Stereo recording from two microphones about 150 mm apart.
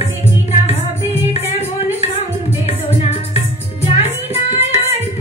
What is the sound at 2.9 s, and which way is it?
Music, 45° left (ahead or behind).